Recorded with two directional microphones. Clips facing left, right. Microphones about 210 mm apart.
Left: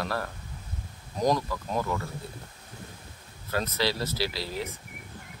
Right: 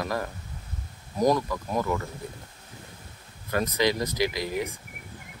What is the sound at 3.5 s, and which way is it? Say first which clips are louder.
Speech: right 4 dB; 15° right (ahead or behind).